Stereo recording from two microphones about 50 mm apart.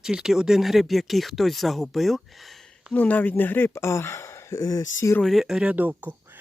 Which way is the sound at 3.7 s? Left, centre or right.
Left.